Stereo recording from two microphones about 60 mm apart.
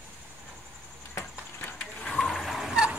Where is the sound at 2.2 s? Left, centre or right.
Centre.